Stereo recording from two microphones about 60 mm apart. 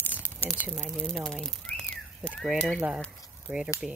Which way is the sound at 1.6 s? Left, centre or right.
Centre.